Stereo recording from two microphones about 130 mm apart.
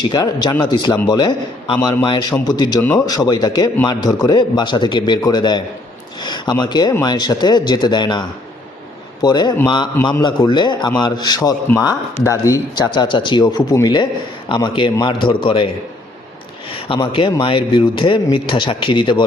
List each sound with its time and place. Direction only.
0.0 s a man's voice: 30° left (ahead or behind)
9.2 s a man's voice: 30° left (ahead or behind)
12.9 s a man's voice: 35° left (ahead or behind)